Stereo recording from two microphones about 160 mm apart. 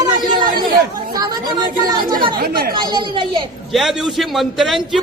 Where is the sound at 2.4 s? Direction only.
70° right (ahead or behind).